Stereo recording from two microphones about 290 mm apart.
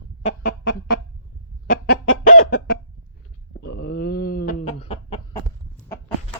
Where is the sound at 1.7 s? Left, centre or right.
Left.